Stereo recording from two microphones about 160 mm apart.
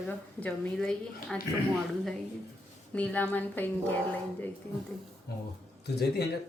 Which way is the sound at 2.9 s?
10° left (ahead or behind).